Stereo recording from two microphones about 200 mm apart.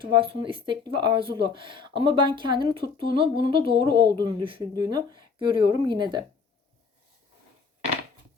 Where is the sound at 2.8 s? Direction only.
45° left (ahead or behind).